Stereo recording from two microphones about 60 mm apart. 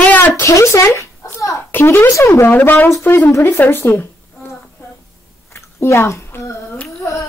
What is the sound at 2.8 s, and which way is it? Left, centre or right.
Speech, left.